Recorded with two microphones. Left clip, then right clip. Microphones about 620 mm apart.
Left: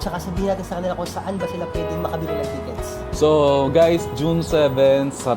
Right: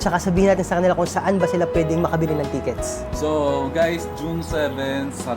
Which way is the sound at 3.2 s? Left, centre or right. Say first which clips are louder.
Left 6 dB; left.